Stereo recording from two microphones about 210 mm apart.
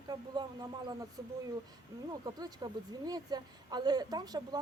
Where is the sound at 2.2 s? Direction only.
20° right (ahead or behind).